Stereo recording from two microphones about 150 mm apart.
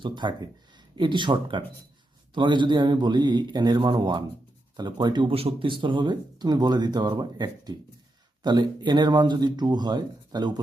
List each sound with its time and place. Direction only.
0.0 s speech: 30° right (ahead or behind)